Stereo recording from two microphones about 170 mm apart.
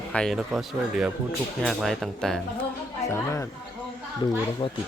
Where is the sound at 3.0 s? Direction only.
15° left (ahead or behind).